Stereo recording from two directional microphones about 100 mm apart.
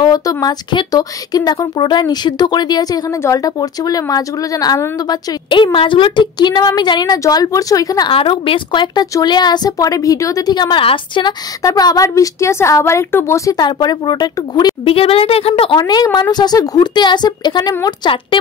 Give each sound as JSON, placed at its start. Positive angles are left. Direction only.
{"t": 0.0, "sound": "a woman's voice", "side_deg": 40}
{"t": 8.1, "sound": "a woman's voice", "side_deg": 65}
{"t": 11.6, "sound": "speech", "side_deg": 40}
{"t": 13.6, "sound": "a woman's voice", "side_deg": 45}
{"t": 14.9, "sound": "a woman's voice", "side_deg": 70}
{"t": 15.7, "sound": "a woman's voice", "side_deg": 40}